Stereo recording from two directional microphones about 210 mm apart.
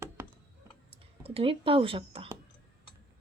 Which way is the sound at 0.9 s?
30° right (ahead or behind).